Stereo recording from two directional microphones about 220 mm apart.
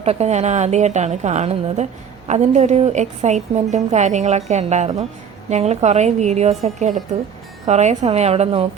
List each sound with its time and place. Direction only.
0.0 s a woman's voice: 30° right (ahead or behind)